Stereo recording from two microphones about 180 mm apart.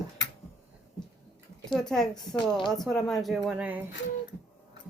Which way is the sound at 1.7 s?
Centre (ahead or behind).